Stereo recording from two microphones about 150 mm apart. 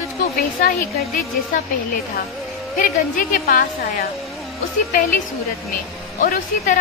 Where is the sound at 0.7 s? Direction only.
65° left (ahead or behind).